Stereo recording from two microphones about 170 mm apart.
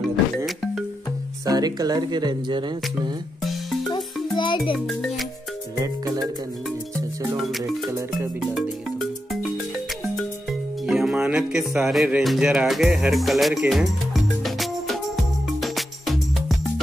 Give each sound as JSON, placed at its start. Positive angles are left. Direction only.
{"t": 1.4, "sound": "speech", "side_deg": -20}
{"t": 3.9, "sound": "music", "side_deg": 25}
{"t": 4.7, "sound": "music", "side_deg": 0}
{"t": 7.3, "sound": "music", "side_deg": 0}
{"t": 10.9, "sound": "music", "side_deg": -5}